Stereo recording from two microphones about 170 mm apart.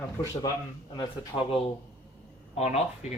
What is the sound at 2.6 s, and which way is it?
Speech, 40° left (ahead or behind).